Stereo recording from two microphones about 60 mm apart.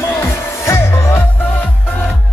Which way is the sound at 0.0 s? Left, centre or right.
Left.